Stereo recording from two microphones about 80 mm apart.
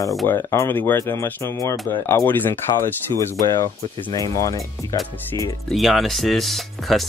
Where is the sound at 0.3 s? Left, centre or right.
Left.